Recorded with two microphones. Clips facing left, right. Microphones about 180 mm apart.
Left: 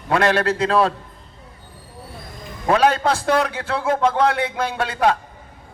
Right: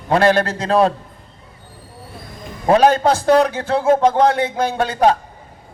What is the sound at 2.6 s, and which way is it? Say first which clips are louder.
A man's voice: right 4 dB; 35° right (ahead or behind).